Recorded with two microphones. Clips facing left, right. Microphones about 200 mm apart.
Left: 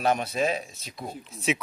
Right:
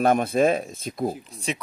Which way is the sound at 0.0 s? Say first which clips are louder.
Right 6 dB; 50° right (ahead or behind).